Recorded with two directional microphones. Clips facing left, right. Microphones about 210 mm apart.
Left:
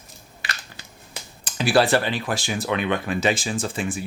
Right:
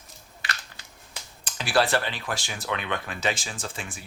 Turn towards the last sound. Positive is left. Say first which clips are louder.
# left 10 dB
turn(degrees=10)  # may be behind; listen again after turning